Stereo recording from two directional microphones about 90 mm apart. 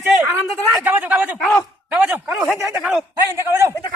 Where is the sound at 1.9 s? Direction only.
20° right (ahead or behind).